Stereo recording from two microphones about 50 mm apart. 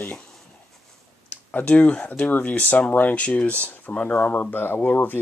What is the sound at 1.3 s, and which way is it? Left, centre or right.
Speech, left.